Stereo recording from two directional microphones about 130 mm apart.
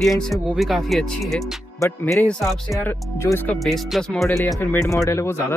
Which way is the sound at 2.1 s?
5° left (ahead or behind).